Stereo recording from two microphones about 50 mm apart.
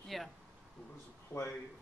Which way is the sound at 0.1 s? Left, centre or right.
Centre.